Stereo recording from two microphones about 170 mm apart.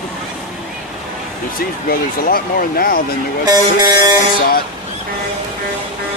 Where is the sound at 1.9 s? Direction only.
60° left (ahead or behind).